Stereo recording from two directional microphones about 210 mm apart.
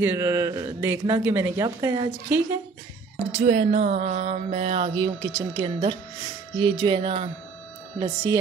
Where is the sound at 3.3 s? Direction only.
35° right (ahead or behind).